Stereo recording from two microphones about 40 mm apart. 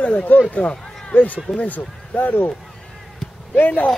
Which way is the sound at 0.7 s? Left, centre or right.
Left.